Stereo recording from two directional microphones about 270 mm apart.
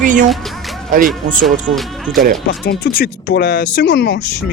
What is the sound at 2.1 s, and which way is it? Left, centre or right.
Speech, right.